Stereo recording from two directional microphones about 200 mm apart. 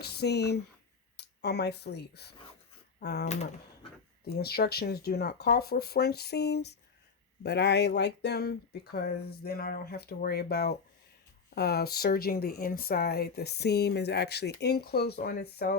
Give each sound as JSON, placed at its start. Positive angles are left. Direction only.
{"t": 0.0, "sound": "speech", "side_deg": 55}
{"t": 4.3, "sound": "speech", "side_deg": 50}